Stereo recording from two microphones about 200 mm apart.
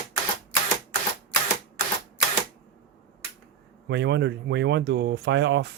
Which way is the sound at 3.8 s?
60° right (ahead or behind).